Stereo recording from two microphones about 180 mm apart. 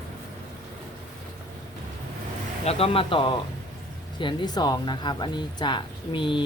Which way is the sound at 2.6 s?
30° left (ahead or behind).